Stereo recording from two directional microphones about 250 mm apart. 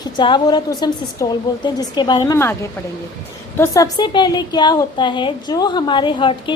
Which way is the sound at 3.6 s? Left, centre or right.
Centre.